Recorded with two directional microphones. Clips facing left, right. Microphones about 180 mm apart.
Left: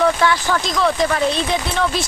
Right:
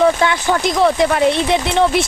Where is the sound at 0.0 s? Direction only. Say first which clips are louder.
Right 2 dB; 20° right (ahead or behind).